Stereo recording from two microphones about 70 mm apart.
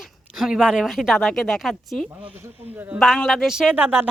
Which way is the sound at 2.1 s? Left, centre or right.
Centre.